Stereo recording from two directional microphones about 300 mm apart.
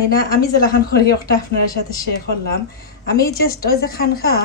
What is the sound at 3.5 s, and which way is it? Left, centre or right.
Speech, left.